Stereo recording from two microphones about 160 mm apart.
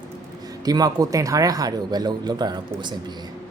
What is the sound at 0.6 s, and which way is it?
Speech, 25° right (ahead or behind).